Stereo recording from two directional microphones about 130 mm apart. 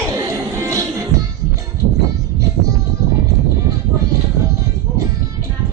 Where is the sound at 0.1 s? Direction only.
25° right (ahead or behind).